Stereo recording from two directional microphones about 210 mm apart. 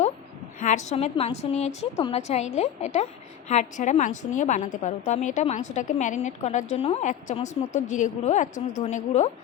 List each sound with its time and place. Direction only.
0.6 s a woman's voice: 35° left (ahead or behind)